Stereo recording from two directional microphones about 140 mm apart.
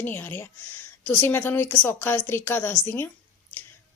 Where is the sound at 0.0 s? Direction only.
15° left (ahead or behind).